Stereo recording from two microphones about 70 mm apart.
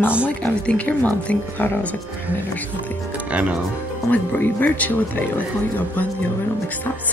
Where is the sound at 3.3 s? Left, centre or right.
Centre.